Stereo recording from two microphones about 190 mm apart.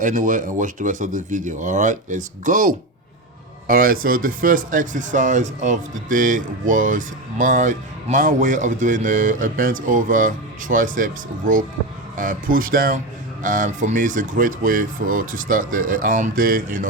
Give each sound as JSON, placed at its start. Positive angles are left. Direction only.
{"t": 0.0, "sound": "speech", "side_deg": -40}